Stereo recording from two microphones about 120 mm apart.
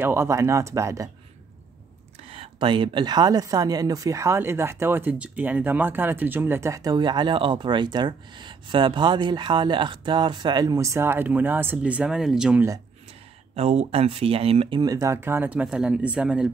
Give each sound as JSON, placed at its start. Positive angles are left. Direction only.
{"t": 0.0, "sound": "speech", "side_deg": -20}
{"t": 2.2, "sound": "speech", "side_deg": -50}
{"t": 13.6, "sound": "speech", "side_deg": -60}
{"t": 14.8, "sound": "speech", "side_deg": -30}